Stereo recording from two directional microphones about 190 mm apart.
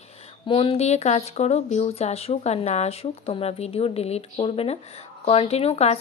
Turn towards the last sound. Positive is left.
turn(degrees=35)  # may be behind; listen again after turning